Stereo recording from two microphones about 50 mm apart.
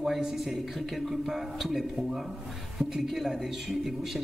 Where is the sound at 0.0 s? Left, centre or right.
Centre.